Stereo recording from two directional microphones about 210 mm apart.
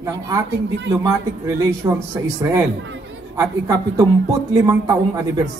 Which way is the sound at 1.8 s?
15° right (ahead or behind).